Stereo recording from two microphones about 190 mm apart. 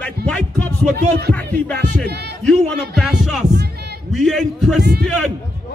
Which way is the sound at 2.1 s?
60° right (ahead or behind).